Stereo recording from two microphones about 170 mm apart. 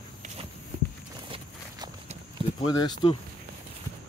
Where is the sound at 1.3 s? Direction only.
30° right (ahead or behind).